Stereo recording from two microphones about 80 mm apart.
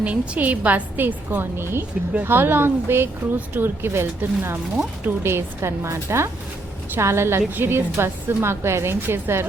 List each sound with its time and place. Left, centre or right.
0.0 s a woman's voice: centre